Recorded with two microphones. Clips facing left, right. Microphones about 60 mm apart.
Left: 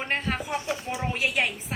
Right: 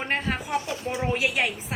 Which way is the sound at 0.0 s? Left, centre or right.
Centre.